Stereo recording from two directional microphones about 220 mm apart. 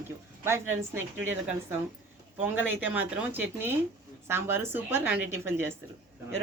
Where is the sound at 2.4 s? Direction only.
10° right (ahead or behind).